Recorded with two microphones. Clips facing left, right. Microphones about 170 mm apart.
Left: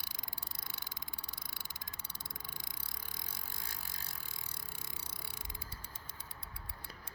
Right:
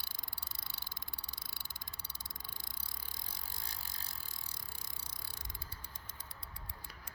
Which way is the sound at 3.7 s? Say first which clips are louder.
Left 1 dB; 50° left (ahead or behind).